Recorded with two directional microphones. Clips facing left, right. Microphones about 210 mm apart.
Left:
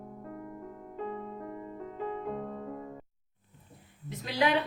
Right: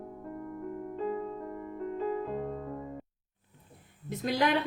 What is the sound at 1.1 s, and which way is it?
Music, centre (ahead or behind).